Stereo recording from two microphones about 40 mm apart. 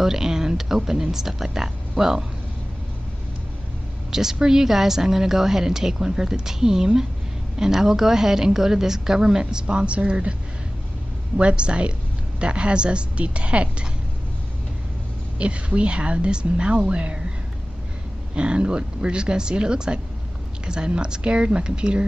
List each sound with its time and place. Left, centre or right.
0.0 s a woman's voice: centre
4.1 s a woman's voice: centre
11.3 s a woman's voice: right
15.3 s a woman's voice: right
18.3 s a woman's voice: right